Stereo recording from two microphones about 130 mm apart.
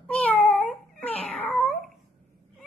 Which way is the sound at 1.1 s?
50° left (ahead or behind).